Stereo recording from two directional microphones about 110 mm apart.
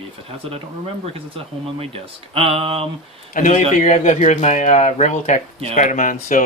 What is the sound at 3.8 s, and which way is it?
Speech, 85° left.